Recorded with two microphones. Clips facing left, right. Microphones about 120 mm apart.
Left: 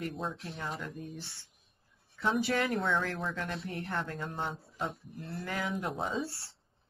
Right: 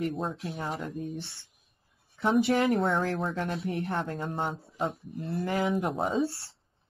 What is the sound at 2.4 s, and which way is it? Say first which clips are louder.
Speech: right 6 dB; 25° right (ahead or behind).